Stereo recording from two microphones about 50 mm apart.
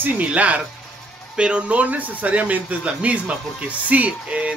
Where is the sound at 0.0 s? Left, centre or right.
Right.